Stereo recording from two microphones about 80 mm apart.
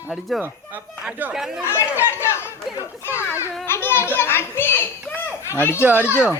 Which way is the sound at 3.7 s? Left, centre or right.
Left.